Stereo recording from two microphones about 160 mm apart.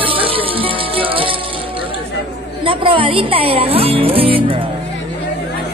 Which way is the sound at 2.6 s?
35° right (ahead or behind).